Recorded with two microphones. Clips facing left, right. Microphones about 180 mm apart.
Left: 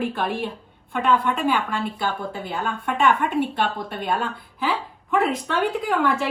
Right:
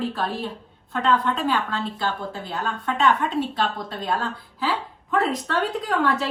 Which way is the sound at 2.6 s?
10° left (ahead or behind).